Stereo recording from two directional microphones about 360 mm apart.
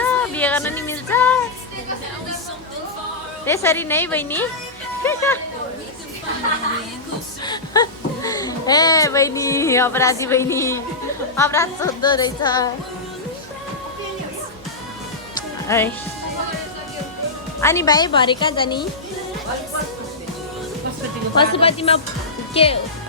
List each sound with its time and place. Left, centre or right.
0.0 s a sound: centre
3.4 s a woman's voice: centre
7.4 s a woman's voice: centre
15.6 s speech: centre
17.6 s a woman's voice: centre
21.3 s a woman's voice: centre